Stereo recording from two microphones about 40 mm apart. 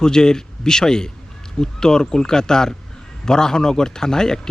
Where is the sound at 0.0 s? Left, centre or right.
Centre.